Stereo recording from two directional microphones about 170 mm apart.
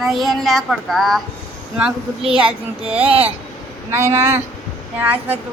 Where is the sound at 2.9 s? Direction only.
35° right (ahead or behind).